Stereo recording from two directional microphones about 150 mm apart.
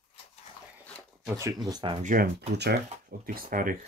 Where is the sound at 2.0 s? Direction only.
70° right (ahead or behind).